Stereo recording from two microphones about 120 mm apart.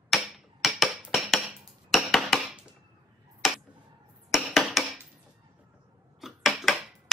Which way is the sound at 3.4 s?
5° right (ahead or behind).